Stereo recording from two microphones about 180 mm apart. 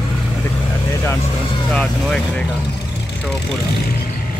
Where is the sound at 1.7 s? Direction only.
5° left (ahead or behind).